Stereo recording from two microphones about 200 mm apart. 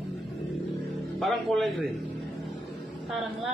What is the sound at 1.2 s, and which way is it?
Speech, centre (ahead or behind).